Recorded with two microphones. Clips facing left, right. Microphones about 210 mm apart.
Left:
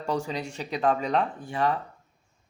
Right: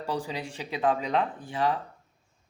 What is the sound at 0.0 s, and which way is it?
Speech, 5° right (ahead or behind).